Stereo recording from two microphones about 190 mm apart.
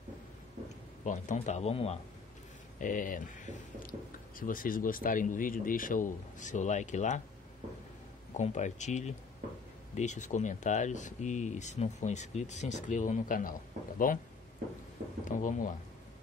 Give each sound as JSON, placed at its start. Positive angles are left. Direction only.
{"t": 1.0, "sound": "speech", "side_deg": 40}
{"t": 2.8, "sound": "a man's voice", "side_deg": 45}
{"t": 8.3, "sound": "speech", "side_deg": 40}
{"t": 15.2, "sound": "speech", "side_deg": 45}